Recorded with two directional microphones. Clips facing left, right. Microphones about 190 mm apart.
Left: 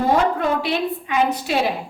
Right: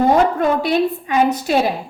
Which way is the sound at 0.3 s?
45° right (ahead or behind).